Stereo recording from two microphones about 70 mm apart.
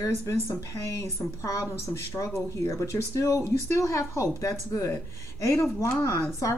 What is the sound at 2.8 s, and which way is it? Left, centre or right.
A woman's voice, left.